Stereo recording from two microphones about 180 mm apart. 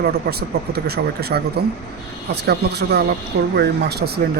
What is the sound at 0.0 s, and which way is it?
Speech, 60° right (ahead or behind).